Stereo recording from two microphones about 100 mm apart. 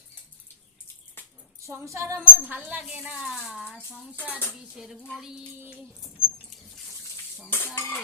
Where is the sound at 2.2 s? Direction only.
15° right (ahead or behind).